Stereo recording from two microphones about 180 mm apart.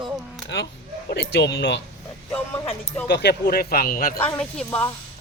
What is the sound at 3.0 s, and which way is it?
Speech, 65° left (ahead or behind).